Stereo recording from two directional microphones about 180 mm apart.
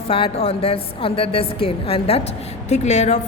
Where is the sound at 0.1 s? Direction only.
30° left (ahead or behind).